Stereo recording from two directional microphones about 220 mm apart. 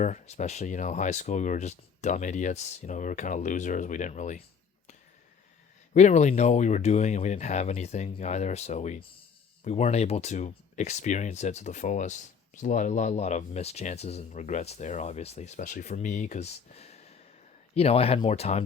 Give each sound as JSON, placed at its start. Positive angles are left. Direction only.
{"t": 0.0, "sound": "speech", "side_deg": 35}
{"t": 5.9, "sound": "speech", "side_deg": 35}